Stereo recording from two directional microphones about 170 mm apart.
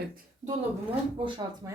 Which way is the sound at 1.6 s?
15° right (ahead or behind).